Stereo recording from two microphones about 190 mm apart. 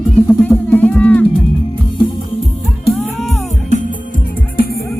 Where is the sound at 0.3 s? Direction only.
10° left (ahead or behind).